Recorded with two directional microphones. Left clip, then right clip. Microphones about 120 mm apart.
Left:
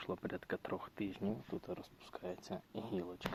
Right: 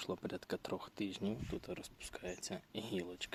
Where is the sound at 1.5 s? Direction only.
10° right (ahead or behind).